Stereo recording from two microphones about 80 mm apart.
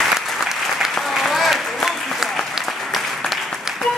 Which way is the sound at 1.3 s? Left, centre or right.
Centre.